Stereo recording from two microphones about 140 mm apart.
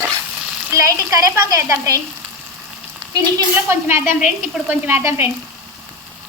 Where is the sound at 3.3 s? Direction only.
15° right (ahead or behind).